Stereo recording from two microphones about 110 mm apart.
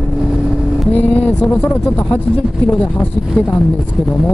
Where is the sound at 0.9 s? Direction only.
15° left (ahead or behind).